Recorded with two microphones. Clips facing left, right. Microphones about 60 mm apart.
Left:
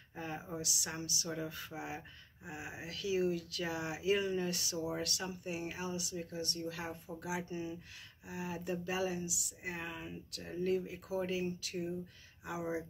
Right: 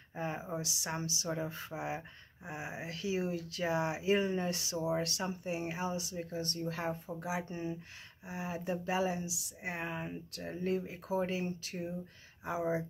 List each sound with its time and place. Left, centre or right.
0.1 s speech: right
7.4 s speech: right
8.3 s speech: right